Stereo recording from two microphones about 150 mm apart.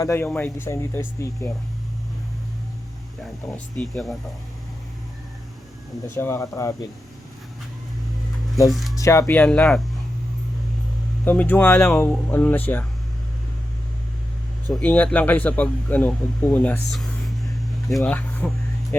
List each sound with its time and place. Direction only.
0.0 s speech: 20° left (ahead or behind)
3.5 s speech: centre (ahead or behind)
6.1 s speech: 15° left (ahead or behind)
8.7 s speech: centre (ahead or behind)
9.0 s speech: 20° left (ahead or behind)
11.3 s speech: 10° left (ahead or behind)
14.7 s speech: 10° left (ahead or behind)
17.9 s a sound: 10° left (ahead or behind)